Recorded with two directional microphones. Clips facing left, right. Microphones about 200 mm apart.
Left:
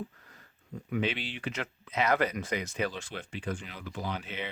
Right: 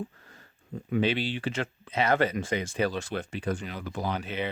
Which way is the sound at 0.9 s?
35° right (ahead or behind).